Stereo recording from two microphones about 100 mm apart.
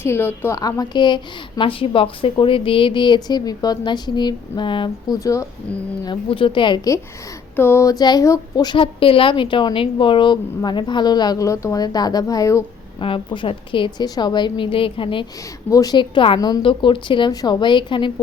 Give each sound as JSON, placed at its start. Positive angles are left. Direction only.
{"t": 0.0, "sound": "a woman's voice", "side_deg": 25}
{"t": 0.6, "sound": "a woman's voice", "side_deg": 45}
{"t": 5.2, "sound": "speech", "side_deg": 30}
{"t": 6.1, "sound": "a woman's voice", "side_deg": 60}
{"t": 7.5, "sound": "a sound", "side_deg": 25}
{"t": 7.9, "sound": "speech", "side_deg": 40}
{"t": 8.6, "sound": "a woman's voice", "side_deg": 55}
{"t": 13.0, "sound": "a woman's voice", "side_deg": 60}
{"t": 15.7, "sound": "speech", "side_deg": 35}
{"t": 16.0, "sound": "a woman's voice", "side_deg": 60}
{"t": 17.3, "sound": "a woman's voice", "side_deg": 45}